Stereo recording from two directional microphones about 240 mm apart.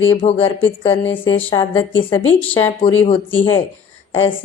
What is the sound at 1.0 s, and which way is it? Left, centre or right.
Speech, left.